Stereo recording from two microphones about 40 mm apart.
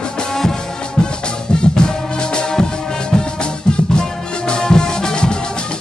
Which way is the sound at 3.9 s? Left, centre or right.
Left.